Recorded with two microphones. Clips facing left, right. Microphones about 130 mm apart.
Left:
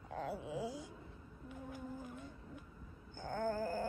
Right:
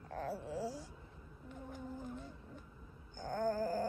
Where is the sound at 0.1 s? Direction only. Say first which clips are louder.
Right 1 dB; 15° left (ahead or behind).